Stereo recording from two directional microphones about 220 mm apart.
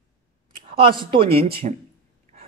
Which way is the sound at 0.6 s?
25° right (ahead or behind).